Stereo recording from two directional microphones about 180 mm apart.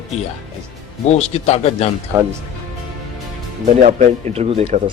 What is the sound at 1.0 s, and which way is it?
Speech, 35° left (ahead or behind).